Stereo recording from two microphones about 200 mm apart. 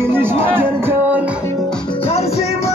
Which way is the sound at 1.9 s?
30° left (ahead or behind).